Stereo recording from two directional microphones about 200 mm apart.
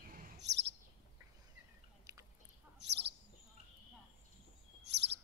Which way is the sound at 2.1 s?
15° right (ahead or behind).